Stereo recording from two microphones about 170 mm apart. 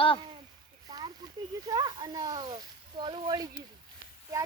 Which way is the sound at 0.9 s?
25° right (ahead or behind).